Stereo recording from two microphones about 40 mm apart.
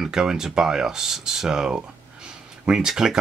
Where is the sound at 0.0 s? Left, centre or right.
Centre.